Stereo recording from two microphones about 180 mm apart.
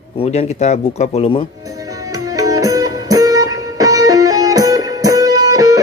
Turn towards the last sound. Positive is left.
turn(degrees=-20)  # may be behind; listen again after turning